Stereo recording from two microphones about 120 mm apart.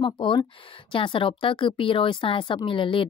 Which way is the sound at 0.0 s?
45° left (ahead or behind).